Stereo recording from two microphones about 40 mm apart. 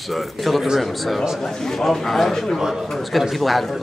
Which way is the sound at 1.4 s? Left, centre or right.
Centre.